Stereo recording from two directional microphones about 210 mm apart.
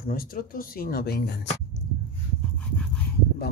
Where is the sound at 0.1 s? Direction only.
45° left (ahead or behind).